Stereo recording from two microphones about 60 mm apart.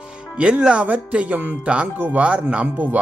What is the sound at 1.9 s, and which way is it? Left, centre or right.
Speech, right.